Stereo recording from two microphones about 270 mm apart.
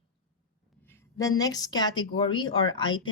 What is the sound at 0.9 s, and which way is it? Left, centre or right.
Speech, centre.